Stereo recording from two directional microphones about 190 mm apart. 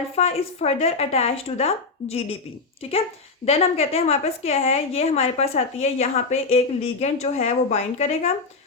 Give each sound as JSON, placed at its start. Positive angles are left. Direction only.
{"t": 0.2, "sound": "a woman's voice", "side_deg": 35}
{"t": 3.4, "sound": "a woman's voice", "side_deg": 30}